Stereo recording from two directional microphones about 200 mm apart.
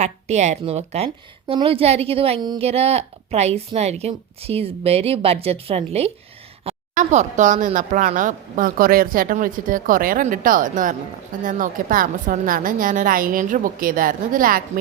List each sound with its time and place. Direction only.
0.0 s a woman's voice: 35° right (ahead or behind)